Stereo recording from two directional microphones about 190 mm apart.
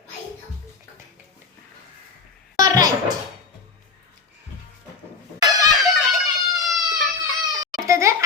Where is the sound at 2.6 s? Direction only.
20° right (ahead or behind).